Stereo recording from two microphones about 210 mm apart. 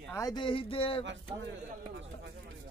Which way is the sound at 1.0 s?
60° right (ahead or behind).